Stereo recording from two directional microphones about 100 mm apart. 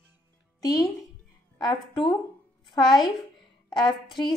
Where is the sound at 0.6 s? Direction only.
40° left (ahead or behind).